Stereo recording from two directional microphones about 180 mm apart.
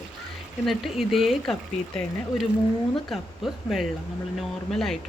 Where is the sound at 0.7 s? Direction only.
Centre (ahead or behind).